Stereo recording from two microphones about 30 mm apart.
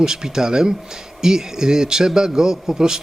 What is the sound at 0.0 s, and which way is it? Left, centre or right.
Speech, centre.